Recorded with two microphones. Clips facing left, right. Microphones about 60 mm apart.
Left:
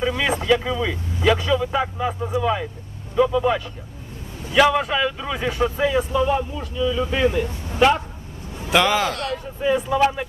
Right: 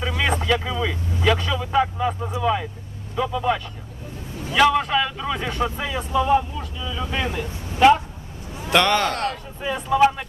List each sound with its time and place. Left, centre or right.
0.2 s a man's voice: centre
9.1 s speech: right
9.6 s a man's voice: centre